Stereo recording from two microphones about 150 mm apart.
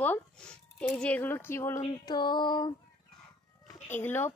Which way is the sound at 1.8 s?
30° left (ahead or behind).